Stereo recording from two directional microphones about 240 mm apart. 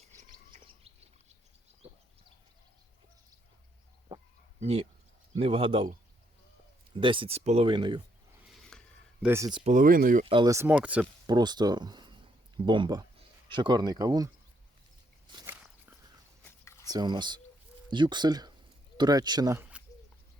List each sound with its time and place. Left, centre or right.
0.5 s bird: right
4.6 s speech: right
6.9 s speech: right
8.7 s a sound: centre
9.2 s speech: centre
9.7 s speech: right
10.2 s speech: centre
11.3 s speech: centre
15.4 s walk: centre
16.9 s speech: centre